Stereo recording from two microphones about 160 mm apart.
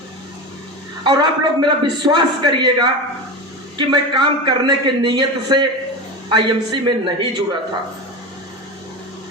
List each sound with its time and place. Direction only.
1.0 s a man's voice: 30° right (ahead or behind)